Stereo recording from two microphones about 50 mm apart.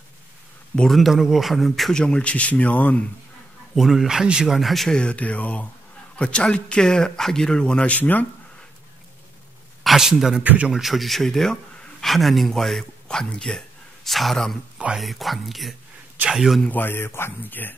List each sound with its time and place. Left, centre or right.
0.8 s speech: centre
2.0 s speech: centre
3.7 s speech: centre
4.6 s speech: centre
4.8 s speech: centre
5.1 s speech: left
6.1 s speech: centre
8.0 s speech: left
9.8 s a man's voice: centre
14.0 s speech: centre
16.6 s speech: left
17.4 s speech: left